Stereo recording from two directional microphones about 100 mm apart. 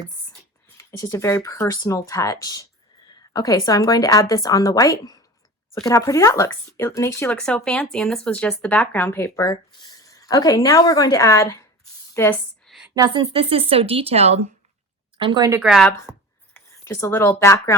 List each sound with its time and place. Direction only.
0.8 s speech: 30° left (ahead or behind)
7.3 s speech: 10° left (ahead or behind)
12.6 s a sound: centre (ahead or behind)
13.1 s speech: 65° right (ahead or behind); by 14.4 s 90° right
15.2 s speech: 50° right (ahead or behind)
15.6 s a woman's voice: 5° right (ahead or behind)
16.8 s speech: 30° left (ahead or behind)